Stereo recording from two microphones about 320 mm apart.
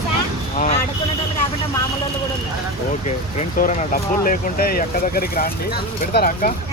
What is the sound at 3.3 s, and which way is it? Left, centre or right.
Speech, left.